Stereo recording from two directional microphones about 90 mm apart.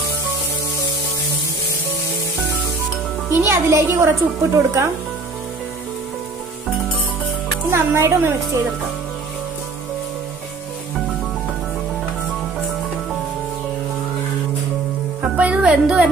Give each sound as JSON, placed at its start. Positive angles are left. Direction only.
{"t": 3.3, "sound": "a woman's voice", "side_deg": -30}
{"t": 7.7, "sound": "speech", "side_deg": -25}
{"t": 15.3, "sound": "speech", "side_deg": -15}